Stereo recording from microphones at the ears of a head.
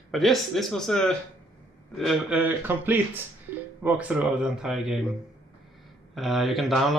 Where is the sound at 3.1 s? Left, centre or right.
Right.